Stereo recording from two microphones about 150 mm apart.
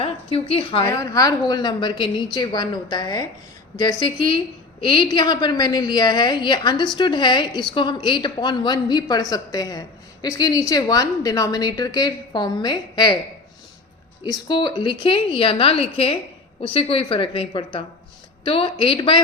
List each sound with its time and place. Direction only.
0.0 s a woman's voice: 40° left (ahead or behind)
0.9 s a woman's voice: 20° left (ahead or behind)
14.3 s a woman's voice: 30° left (ahead or behind)